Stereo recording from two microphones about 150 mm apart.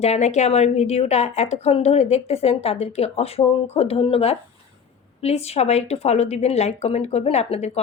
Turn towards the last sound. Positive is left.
turn(degrees=45)  # may be behind; listen again after turning